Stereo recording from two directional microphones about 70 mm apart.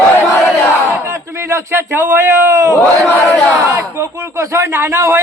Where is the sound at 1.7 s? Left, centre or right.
Right.